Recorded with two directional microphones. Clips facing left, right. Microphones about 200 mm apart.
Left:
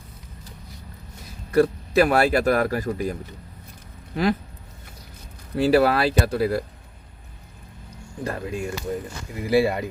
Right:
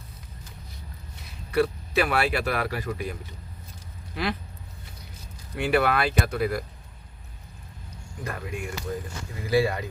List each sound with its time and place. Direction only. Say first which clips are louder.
1.5 s speech: left 5 dB; 45° left (ahead or behind)
5.5 s speech: left 5 dB; 35° left (ahead or behind)
8.2 s speech: left 6 dB; 30° left (ahead or behind)